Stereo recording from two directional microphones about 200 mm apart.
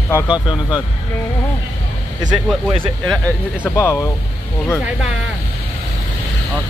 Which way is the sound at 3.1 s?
5° left (ahead or behind).